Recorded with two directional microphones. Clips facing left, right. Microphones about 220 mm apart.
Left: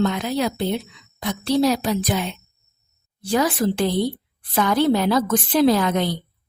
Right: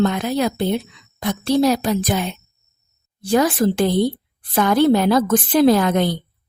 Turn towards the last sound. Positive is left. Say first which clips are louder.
# right 3 dB
turn(degrees=-50)  # may be behind; listen again after turning